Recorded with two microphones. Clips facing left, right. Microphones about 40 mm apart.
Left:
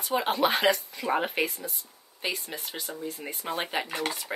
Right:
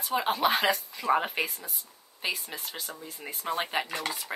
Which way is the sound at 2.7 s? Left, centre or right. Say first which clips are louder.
Left 2 dB; left.